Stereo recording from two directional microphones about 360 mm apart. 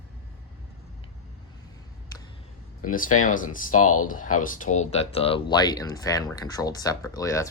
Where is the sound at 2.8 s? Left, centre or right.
Left.